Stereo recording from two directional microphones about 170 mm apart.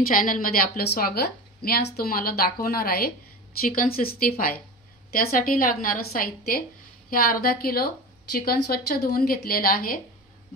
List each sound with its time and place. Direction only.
0.0 s a woman's voice: 55° left (ahead or behind)